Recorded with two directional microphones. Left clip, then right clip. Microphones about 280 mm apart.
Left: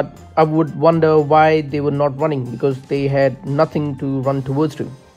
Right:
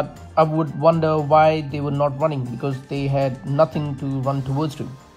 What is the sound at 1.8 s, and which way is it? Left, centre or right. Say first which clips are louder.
Speech: left 4 dB; left.